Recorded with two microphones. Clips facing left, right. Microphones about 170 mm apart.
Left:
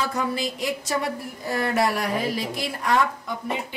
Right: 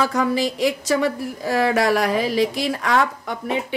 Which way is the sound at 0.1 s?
90° right.